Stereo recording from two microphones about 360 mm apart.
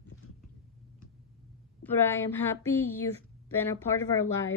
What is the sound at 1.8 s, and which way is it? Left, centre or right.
Speech, centre.